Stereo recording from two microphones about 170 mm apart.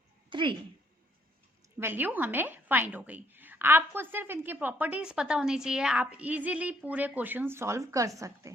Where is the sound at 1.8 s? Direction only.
10° right (ahead or behind).